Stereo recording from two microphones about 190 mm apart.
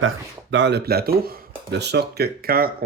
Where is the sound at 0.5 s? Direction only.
65° right (ahead or behind).